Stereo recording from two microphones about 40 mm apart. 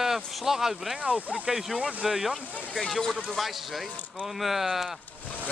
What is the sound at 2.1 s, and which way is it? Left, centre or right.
Speech, centre.